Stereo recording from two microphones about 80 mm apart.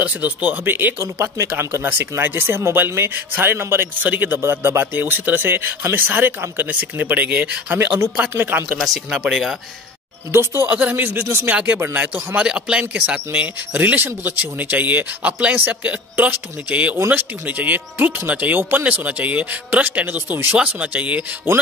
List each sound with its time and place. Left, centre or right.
0.0 s speech: right
8.7 s speech: centre
10.3 s speech: right
11.5 s speech: centre
12.4 s speech: centre